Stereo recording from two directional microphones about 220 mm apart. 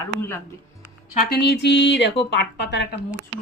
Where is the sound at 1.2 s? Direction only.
45° left (ahead or behind).